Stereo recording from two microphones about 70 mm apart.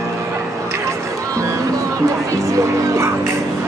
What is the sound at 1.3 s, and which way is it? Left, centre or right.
Music, right.